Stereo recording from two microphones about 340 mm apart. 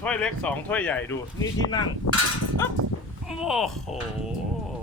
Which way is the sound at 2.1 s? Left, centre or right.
Left.